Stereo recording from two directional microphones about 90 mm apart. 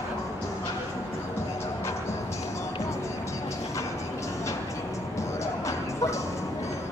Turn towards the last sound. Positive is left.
turn(degrees=35)  # may be behind; listen again after turning